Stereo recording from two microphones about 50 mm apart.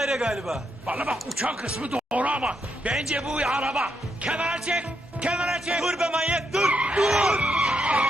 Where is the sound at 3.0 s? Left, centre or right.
Centre.